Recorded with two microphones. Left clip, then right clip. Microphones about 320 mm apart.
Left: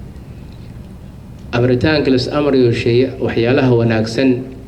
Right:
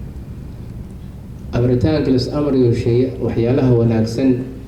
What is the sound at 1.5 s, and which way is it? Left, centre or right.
A man's voice, left.